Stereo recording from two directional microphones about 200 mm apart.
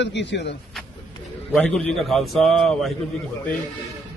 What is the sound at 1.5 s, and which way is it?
A man's voice, centre (ahead or behind).